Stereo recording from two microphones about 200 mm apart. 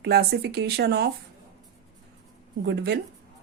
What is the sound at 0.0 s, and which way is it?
Speech, 55° right (ahead or behind).